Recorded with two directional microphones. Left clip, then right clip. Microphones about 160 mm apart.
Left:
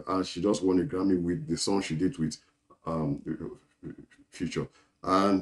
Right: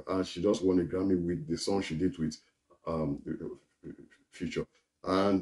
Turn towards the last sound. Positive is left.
turn(degrees=20)  # may be behind; listen again after turning